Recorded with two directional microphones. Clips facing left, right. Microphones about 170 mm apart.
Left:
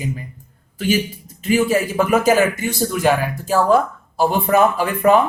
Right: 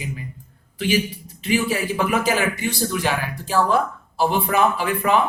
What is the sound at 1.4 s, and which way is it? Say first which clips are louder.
Speech: left 5 dB; 45° left (ahead or behind).